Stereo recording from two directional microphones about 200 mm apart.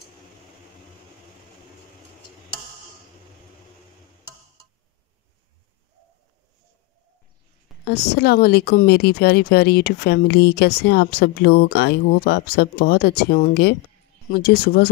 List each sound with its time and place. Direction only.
7.8 s a woman's voice: 55° left (ahead or behind)